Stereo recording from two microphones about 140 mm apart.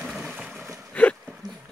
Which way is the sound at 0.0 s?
5° right (ahead or behind).